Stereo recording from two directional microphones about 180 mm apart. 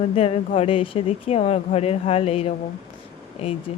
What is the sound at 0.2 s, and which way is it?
A woman's voice, 35° left (ahead or behind).